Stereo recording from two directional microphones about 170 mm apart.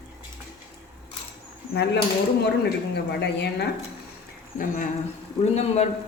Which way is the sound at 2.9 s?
80° left.